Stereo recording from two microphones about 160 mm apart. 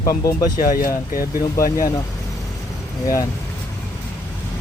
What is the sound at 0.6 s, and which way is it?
Speech, 60° left (ahead or behind).